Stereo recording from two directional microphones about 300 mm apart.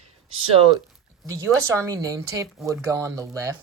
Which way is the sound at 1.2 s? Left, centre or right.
Centre.